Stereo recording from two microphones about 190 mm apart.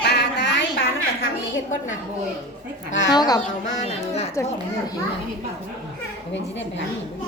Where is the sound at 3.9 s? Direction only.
35° left (ahead or behind).